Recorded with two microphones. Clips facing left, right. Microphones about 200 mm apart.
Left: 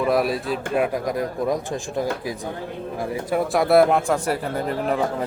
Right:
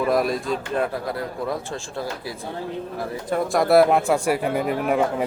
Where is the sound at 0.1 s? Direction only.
5° left (ahead or behind).